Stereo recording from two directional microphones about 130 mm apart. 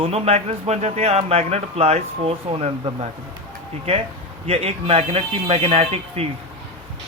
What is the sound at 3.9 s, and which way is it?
A man's voice, 50° right (ahead or behind).